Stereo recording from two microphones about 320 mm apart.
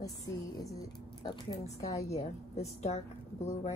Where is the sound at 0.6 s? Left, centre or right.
Centre.